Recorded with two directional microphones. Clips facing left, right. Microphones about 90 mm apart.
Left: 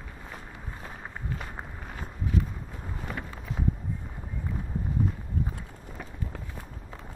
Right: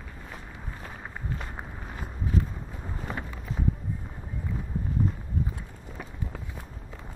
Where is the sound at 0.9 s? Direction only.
5° left (ahead or behind).